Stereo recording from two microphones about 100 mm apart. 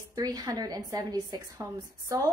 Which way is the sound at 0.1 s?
40° right (ahead or behind).